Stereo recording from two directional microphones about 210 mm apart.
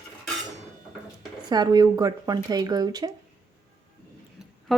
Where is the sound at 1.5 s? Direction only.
20° right (ahead or behind).